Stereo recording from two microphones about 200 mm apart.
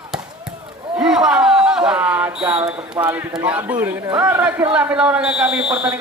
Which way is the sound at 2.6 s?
10° right (ahead or behind).